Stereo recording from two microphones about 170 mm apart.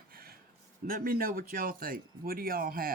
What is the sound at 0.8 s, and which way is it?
Speech, 60° right (ahead or behind).